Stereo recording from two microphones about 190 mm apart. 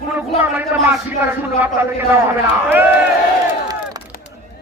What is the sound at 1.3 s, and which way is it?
Speech, 10° right (ahead or behind).